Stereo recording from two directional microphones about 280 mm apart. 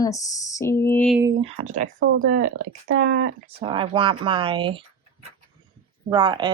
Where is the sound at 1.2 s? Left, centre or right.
Right.